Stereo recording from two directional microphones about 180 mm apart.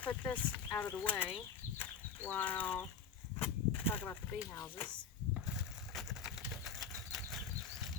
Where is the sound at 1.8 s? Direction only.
10° left (ahead or behind).